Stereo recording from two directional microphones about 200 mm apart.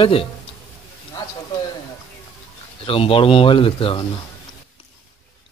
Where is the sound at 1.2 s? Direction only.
15° left (ahead or behind).